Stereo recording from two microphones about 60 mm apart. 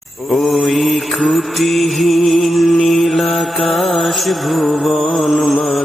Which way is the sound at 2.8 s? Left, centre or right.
Centre.